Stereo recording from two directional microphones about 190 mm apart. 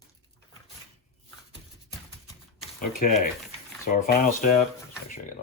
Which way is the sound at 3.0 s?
45° left (ahead or behind).